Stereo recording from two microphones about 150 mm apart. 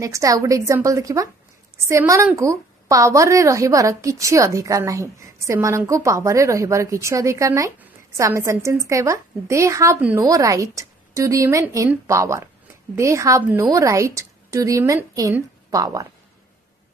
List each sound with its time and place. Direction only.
0.0 s a woman's voice: 20° right (ahead or behind)
9.9 s speech: 10° right (ahead or behind)
10.2 s a woman's voice: 20° right (ahead or behind)